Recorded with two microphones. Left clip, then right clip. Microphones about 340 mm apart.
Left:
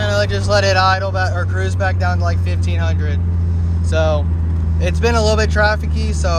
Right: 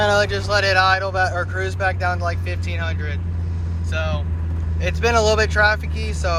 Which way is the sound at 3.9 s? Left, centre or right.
Centre.